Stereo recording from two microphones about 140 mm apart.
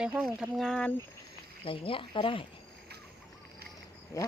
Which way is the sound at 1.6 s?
40° left (ahead or behind).